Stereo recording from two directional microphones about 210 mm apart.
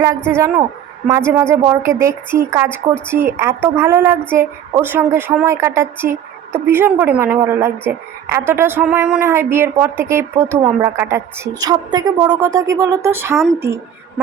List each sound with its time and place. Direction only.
0.3 s a woman's voice: 10° right (ahead or behind)